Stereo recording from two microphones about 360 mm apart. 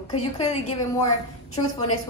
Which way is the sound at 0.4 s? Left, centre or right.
Centre.